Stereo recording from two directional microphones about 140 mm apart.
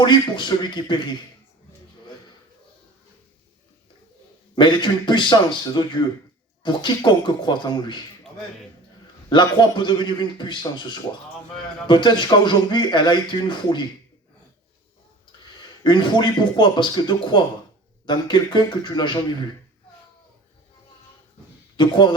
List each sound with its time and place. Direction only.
0.0 s speech: 35° left (ahead or behind)
4.5 s speech: 35° left (ahead or behind)
9.3 s speech: 35° left (ahead or behind)
15.8 s speech: 35° left (ahead or behind)
21.8 s speech: 35° left (ahead or behind)